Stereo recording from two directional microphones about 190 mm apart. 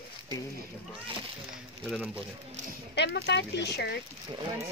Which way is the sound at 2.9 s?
65° left (ahead or behind).